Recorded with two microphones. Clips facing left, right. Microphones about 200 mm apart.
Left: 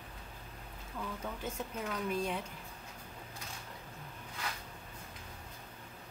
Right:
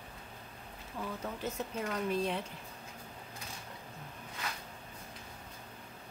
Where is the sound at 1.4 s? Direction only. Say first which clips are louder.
Right 2 dB; centre (ahead or behind).